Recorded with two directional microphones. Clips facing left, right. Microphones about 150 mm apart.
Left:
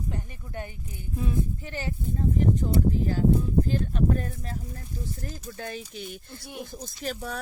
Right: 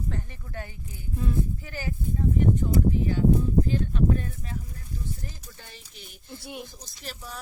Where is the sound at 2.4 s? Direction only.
35° left (ahead or behind).